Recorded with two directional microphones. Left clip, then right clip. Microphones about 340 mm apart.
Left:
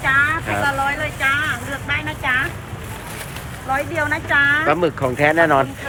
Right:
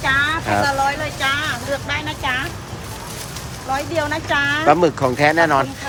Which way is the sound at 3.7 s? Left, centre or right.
Centre.